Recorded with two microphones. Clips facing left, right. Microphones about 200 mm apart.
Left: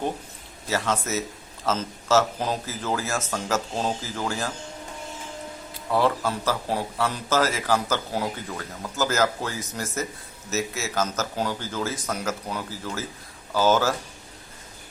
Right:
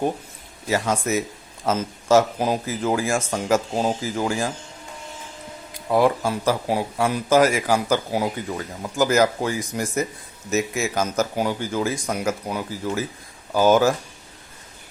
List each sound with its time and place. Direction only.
0.7 s speech: 15° right (ahead or behind)
5.7 s speech: 15° right (ahead or behind)